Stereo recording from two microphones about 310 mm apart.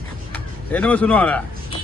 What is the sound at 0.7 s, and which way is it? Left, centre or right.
Speech, centre.